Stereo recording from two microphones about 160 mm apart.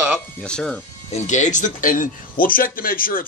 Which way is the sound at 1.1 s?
50° left (ahead or behind).